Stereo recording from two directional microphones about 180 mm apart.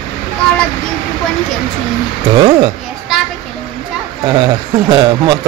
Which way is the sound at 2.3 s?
25° right (ahead or behind).